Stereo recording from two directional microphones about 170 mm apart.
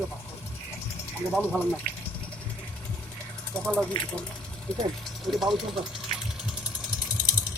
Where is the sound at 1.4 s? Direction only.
10° left (ahead or behind).